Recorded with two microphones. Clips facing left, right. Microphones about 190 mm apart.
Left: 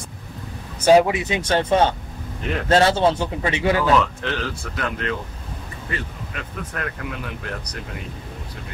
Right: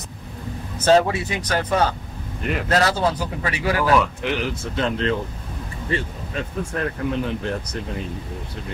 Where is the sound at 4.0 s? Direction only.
15° right (ahead or behind).